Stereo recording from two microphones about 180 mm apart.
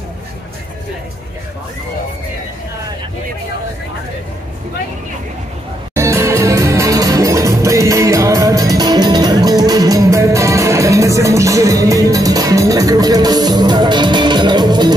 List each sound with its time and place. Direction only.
5.9 s music: 15° right (ahead or behind)